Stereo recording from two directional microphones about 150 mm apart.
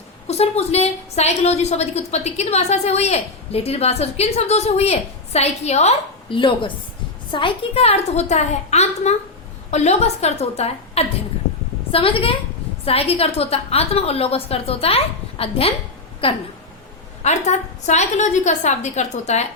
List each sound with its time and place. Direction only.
0.3 s a woman's voice: 45° left (ahead or behind)
17.2 s a woman's voice: 50° left (ahead or behind)